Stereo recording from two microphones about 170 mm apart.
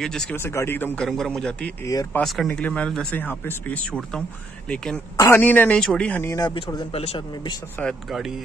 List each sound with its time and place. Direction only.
0.0 s a man's voice: 5° left (ahead or behind)
5.1 s speech: 15° left (ahead or behind)
6.3 s speech: 20° left (ahead or behind)
7.8 s a man's voice: centre (ahead or behind)